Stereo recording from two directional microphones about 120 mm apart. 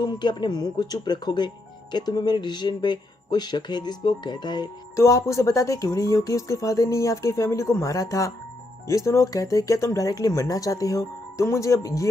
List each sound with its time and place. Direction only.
0.0 s speech: 40° left (ahead or behind)
4.9 s speech: 25° left (ahead or behind)